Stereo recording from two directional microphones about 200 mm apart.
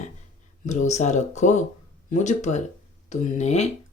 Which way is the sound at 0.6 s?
35° left (ahead or behind).